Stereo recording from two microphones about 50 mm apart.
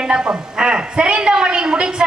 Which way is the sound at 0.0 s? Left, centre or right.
Centre.